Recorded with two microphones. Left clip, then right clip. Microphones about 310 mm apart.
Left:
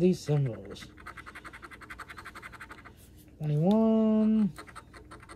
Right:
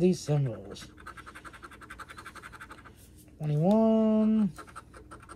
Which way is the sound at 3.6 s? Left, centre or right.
Right.